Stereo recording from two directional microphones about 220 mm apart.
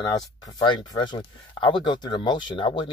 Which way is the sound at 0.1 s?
20° left (ahead or behind).